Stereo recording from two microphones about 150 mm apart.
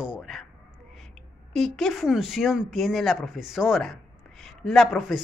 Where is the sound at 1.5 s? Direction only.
Centre (ahead or behind).